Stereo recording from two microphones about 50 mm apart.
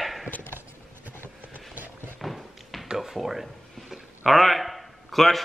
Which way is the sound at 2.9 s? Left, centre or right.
Centre.